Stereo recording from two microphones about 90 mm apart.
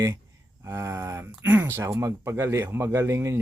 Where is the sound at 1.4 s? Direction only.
20° right (ahead or behind).